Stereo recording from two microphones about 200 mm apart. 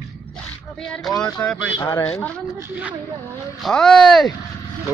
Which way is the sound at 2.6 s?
5° right (ahead or behind).